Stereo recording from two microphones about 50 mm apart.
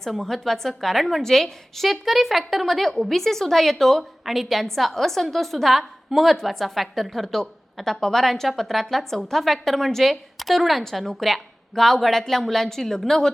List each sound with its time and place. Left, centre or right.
0.0 s a woman's voice: centre